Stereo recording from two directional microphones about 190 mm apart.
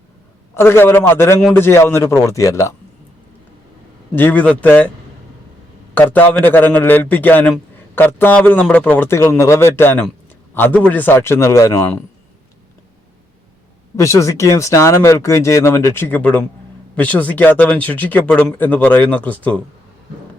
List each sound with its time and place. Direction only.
0.5 s speech: 15° left (ahead or behind)
4.1 s speech: 10° left (ahead or behind)
5.9 s a man's voice: 10° left (ahead or behind)
13.9 s speech: 15° left (ahead or behind)